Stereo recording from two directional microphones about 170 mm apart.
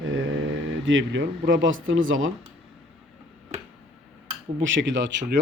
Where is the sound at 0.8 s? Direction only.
90° right.